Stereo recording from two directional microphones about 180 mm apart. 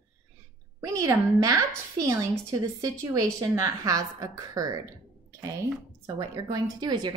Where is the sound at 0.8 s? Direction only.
15° right (ahead or behind).